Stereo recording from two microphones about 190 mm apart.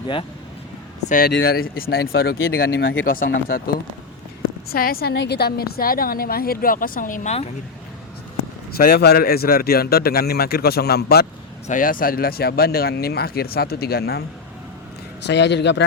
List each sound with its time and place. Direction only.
1.0 s a woman's voice: 45° left (ahead or behind)
4.7 s a woman's voice: 50° left (ahead or behind)
8.7 s a woman's voice: 50° left (ahead or behind)
15.3 s speech: 65° left (ahead or behind)